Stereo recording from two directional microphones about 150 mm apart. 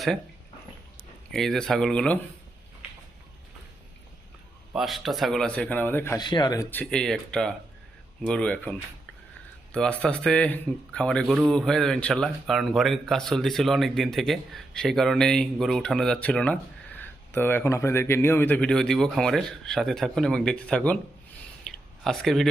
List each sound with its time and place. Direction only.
1.3 s speech: 5° left (ahead or behind)
4.7 s speech: centre (ahead or behind); by 6.1 s 15° left (ahead or behind)
6.1 s speech: 30° left (ahead or behind)
6.7 s a man's voice: 10° left (ahead or behind)
9.7 s a man's voice: 5° left (ahead or behind)
21.7 s a sound: centre (ahead or behind)